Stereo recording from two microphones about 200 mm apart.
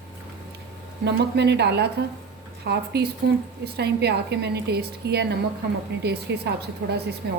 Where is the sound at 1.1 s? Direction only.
60° right (ahead or behind).